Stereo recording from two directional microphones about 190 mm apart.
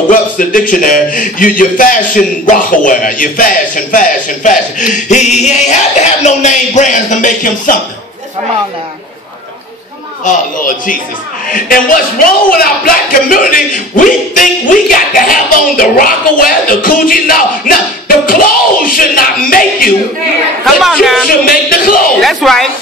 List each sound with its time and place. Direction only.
0.1 s a man's voice: 45° left (ahead or behind)
10.2 s a man's voice: 45° left (ahead or behind)
12.4 s a man's voice: 50° left (ahead or behind)
20.6 s speech: centre (ahead or behind)
21.3 s a man's voice: 50° left (ahead or behind)
22.2 s speech: centre (ahead or behind)